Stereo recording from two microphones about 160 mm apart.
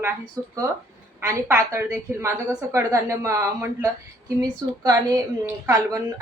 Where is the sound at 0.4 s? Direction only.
20° right (ahead or behind).